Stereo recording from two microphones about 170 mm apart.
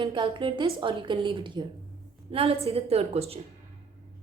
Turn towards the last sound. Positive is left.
turn(degrees=-35)  # may be behind; listen again after turning